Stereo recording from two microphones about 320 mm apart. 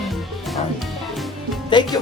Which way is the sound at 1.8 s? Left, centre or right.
Centre.